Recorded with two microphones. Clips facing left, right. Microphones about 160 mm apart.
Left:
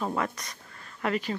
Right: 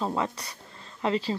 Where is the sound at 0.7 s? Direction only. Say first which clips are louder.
Right 2 dB; 25° right (ahead or behind).